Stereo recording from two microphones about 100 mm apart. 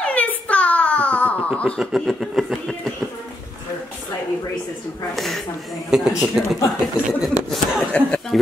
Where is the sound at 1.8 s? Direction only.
Centre (ahead or behind).